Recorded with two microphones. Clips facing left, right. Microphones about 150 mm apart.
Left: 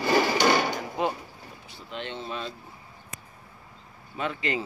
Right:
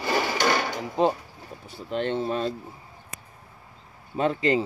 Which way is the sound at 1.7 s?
45° right (ahead or behind).